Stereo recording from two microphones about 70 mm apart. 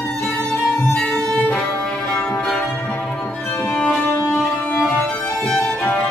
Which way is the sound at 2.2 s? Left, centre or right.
Centre.